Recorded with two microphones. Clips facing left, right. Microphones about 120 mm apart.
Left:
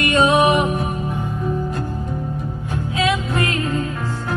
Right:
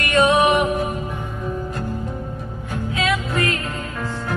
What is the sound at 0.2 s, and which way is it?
Music, 30° left (ahead or behind).